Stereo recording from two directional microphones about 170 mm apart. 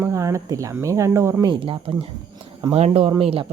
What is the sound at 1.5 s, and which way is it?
Speech, 30° right (ahead or behind).